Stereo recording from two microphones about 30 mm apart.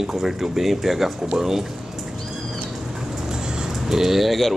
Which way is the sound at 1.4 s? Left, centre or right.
Centre.